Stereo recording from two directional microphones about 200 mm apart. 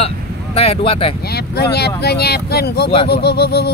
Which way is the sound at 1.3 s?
55° left (ahead or behind).